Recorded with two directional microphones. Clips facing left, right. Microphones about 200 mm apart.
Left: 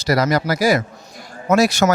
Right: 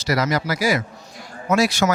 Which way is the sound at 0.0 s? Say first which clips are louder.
Left 4 dB; 35° left (ahead or behind).